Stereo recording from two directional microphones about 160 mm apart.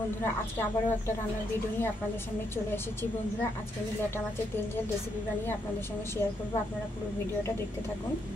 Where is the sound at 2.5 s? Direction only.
15° left (ahead or behind).